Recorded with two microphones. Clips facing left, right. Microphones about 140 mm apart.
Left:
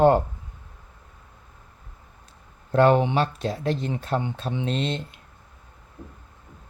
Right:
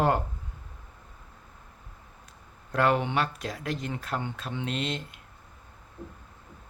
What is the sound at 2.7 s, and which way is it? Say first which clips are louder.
Speech: left 7 dB; 30° left (ahead or behind).